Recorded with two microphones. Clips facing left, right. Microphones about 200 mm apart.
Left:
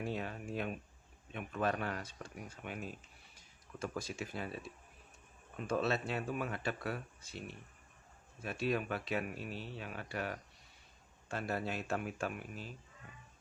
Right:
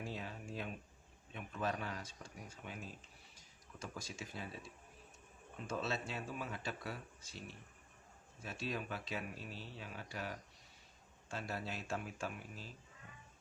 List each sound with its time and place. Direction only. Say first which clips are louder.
0.0 s a sound: left 6 dB; 60° left (ahead or behind)
1.3 s speech: left 5 dB; 60° left (ahead or behind)
3.3 s music: left 7 dB; 60° left (ahead or behind)
5.6 s speech: left 6 dB; 60° left (ahead or behind)